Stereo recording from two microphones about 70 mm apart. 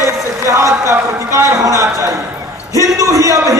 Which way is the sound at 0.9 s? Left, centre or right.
Right.